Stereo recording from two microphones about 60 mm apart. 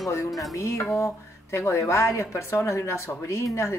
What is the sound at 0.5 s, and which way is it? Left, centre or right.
Speech, left.